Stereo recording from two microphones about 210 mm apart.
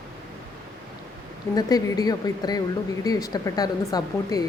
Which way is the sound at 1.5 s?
20° left (ahead or behind).